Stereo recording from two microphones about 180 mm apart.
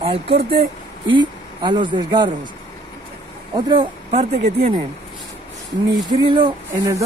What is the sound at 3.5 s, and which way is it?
Speech, 25° right (ahead or behind).